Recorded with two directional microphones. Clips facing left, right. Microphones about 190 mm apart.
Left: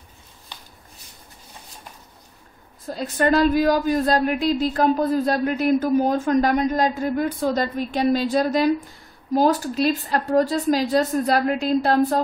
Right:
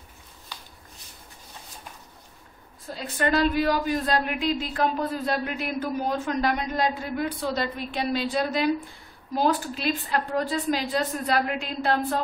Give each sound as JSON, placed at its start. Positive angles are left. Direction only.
{"t": 2.9, "sound": "a woman's voice", "side_deg": 45}